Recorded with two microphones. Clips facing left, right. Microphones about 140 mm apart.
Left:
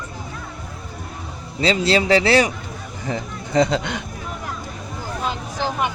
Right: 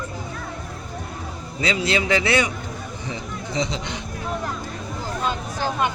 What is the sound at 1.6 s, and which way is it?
Speech, 35° left (ahead or behind).